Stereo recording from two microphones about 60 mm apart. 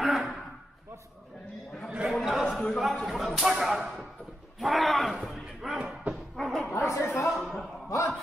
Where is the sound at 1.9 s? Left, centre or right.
Centre.